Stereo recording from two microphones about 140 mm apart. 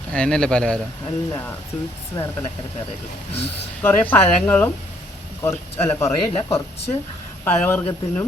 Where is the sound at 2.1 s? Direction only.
25° left (ahead or behind).